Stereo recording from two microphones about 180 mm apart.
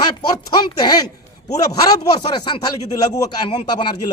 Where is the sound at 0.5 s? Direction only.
20° left (ahead or behind).